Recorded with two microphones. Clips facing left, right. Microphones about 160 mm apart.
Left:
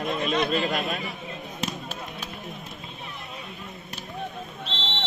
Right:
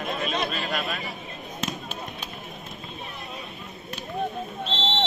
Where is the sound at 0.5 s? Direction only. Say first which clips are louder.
Left 4 dB; 25° left (ahead or behind).